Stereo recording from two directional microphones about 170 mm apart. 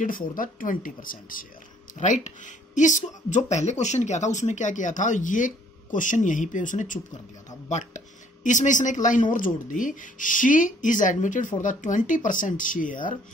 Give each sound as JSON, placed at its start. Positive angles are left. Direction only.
{"t": 0.0, "sound": "speech", "side_deg": 55}